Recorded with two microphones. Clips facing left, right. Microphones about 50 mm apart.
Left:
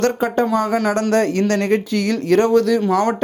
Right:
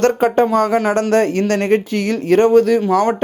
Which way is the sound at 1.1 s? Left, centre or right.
Right.